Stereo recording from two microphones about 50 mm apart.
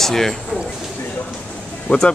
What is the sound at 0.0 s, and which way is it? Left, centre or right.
Speech, centre.